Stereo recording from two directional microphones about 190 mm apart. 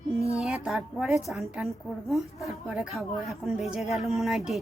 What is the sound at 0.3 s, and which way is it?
A woman's voice, centre (ahead or behind).